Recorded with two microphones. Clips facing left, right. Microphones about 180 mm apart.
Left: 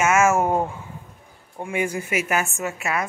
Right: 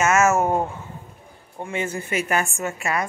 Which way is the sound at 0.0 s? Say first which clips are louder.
Even; 10° left (ahead or behind).